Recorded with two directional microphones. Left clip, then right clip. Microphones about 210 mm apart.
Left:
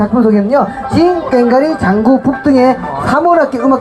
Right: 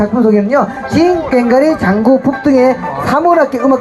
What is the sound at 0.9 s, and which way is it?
Speech, 50° right (ahead or behind).